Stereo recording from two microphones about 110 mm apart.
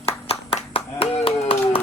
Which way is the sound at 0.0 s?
65° left (ahead or behind).